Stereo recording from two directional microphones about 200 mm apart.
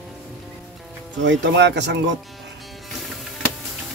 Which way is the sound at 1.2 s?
60° right (ahead or behind).